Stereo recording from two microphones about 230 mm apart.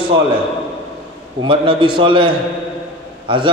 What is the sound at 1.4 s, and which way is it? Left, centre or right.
A man's voice, right.